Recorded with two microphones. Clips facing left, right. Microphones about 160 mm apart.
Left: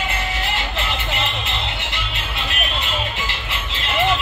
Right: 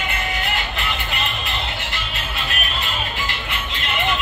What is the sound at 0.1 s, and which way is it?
Music, 30° left (ahead or behind).